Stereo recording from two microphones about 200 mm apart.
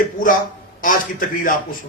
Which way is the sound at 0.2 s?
40° left (ahead or behind).